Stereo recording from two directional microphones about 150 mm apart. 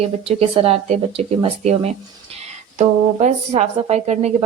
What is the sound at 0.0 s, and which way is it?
A woman's voice, 40° right (ahead or behind).